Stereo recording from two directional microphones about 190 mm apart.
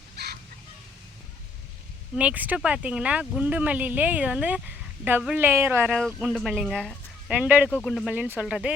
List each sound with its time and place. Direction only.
0.2 s chicken: 60° right (ahead or behind)
2.1 s speech: 5° right (ahead or behind)
5.8 s speech: 5° left (ahead or behind)
7.7 s speech: 5° left (ahead or behind)